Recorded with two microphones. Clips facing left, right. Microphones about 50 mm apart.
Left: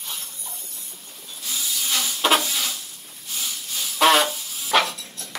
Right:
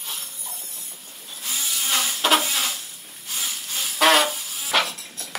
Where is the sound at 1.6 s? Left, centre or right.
Right.